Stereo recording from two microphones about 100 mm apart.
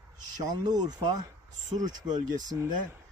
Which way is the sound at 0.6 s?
45° right (ahead or behind).